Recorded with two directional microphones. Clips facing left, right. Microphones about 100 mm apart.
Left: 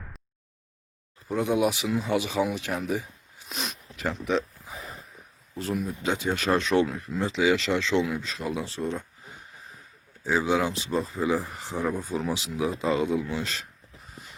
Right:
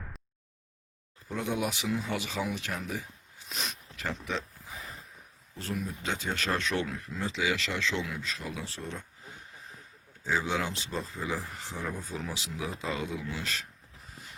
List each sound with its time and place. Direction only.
1.3 s speech: 15° left (ahead or behind)
5.5 s speech: 15° left (ahead or behind)
10.2 s speech: 10° left (ahead or behind)